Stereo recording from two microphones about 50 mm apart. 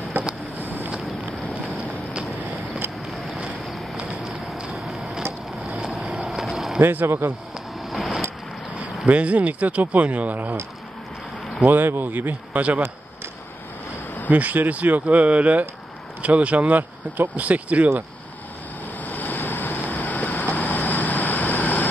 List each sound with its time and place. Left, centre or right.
0.2 s vehicle: right
3.9 s a sound: right
4.7 s vehicle: centre
5.7 s vehicle: centre
6.2 s vehicle: centre
6.8 s speech: right
7.8 s vehicle: centre
8.7 s speech: right
11.6 s speech: right
14.3 s speech: right
18.9 s vehicle: left